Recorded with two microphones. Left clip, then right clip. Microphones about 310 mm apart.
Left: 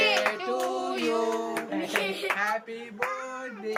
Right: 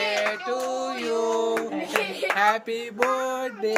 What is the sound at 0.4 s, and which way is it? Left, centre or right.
Music, centre.